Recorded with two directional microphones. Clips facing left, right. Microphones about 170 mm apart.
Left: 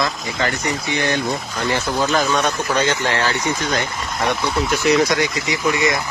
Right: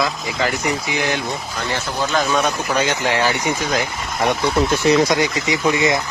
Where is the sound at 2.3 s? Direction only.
10° right (ahead or behind).